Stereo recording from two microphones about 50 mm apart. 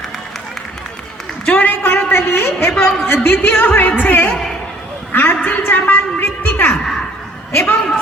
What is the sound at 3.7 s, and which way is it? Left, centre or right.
A man's voice, left.